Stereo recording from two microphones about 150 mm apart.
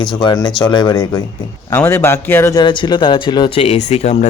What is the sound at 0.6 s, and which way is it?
Speech, 30° left (ahead or behind).